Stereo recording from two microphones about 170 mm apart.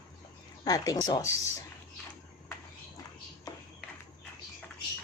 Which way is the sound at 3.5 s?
20° left (ahead or behind).